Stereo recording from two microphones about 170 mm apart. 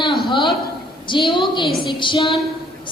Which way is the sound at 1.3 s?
30° left (ahead or behind).